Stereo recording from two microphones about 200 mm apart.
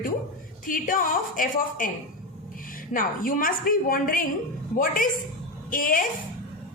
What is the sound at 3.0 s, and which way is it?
A woman's voice, 45° left (ahead or behind).